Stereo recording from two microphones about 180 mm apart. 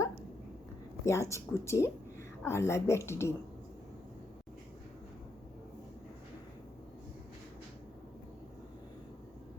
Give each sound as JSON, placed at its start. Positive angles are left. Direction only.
{"t": 1.0, "sound": "a woman's voice", "side_deg": 15}